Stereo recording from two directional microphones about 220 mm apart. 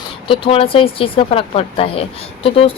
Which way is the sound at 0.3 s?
25° left (ahead or behind).